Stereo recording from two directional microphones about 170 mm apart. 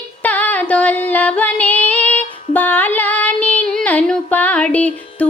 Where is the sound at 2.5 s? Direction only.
10° left (ahead or behind).